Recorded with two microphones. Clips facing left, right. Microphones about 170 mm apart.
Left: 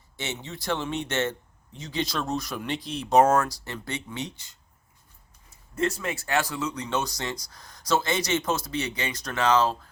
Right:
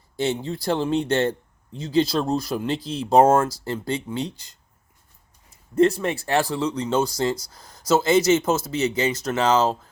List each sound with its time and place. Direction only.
0.2 s speech: 35° right (ahead or behind)
5.7 s speech: 35° right (ahead or behind)